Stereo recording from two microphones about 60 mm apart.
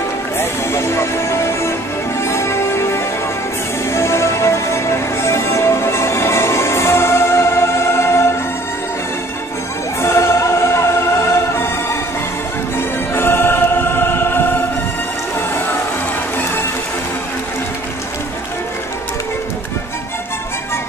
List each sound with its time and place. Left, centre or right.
0.4 s music: left
10.0 s music: left